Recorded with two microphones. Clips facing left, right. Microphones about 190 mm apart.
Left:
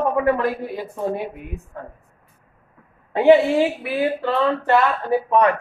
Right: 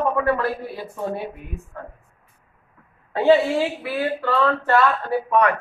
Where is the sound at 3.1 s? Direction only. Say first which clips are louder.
Left 3 dB; 15° left (ahead or behind).